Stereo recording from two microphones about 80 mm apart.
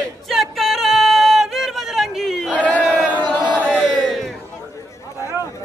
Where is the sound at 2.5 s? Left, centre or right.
Centre.